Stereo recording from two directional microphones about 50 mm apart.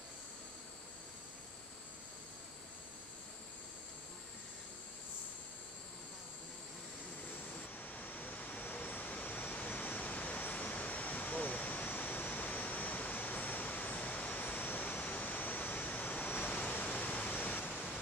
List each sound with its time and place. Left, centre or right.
7.8 s waterfall: left
17.2 s waves: left